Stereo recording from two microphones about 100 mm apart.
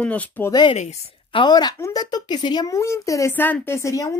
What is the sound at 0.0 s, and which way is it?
Speech, 15° left (ahead or behind).